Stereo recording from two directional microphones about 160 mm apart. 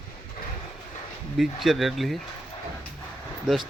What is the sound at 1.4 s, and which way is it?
Speech, centre (ahead or behind).